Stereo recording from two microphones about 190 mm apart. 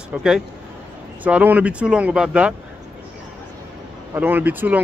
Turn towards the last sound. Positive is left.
turn(degrees=-10)  # may be behind; listen again after turning